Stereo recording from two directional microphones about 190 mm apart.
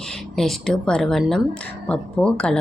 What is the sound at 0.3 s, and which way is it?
A woman's voice, centre (ahead or behind).